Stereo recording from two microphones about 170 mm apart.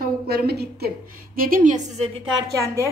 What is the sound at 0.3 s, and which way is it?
A woman's voice, 70° right (ahead or behind).